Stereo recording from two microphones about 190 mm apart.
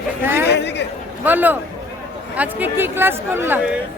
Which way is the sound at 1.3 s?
10° right (ahead or behind).